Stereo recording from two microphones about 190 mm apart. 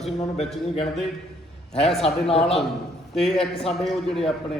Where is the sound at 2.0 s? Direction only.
30° left (ahead or behind).